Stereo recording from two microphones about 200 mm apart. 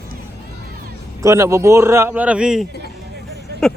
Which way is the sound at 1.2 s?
15° right (ahead or behind).